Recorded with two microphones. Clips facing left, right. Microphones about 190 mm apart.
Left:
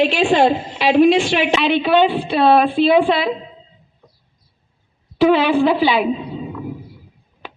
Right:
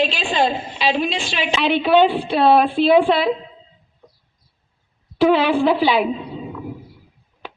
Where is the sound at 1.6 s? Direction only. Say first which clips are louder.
Right 3 dB; 10° right (ahead or behind).